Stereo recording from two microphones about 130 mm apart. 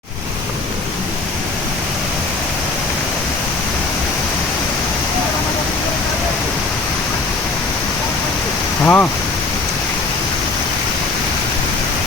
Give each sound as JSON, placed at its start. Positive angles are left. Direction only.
{"t": 8.8, "sound": "speech", "side_deg": 15}